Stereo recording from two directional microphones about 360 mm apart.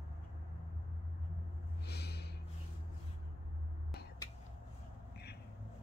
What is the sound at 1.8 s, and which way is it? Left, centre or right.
Snort, left.